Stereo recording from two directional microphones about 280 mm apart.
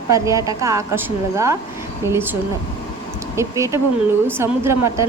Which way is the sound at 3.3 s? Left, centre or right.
Centre.